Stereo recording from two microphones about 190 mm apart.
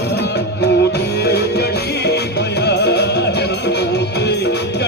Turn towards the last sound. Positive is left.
turn(degrees=60)  # may be behind; listen again after turning